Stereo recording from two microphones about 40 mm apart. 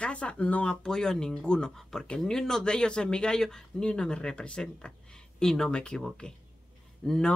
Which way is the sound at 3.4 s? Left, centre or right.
Centre.